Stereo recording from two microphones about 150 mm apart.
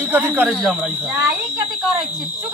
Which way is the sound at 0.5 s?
Centre (ahead or behind).